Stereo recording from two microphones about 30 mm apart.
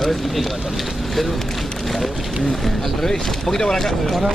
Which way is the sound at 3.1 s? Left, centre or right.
Centre.